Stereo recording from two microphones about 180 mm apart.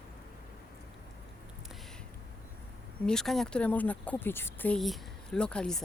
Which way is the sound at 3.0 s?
5° left (ahead or behind).